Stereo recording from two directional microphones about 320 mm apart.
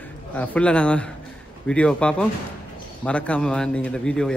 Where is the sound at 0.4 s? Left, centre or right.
Centre.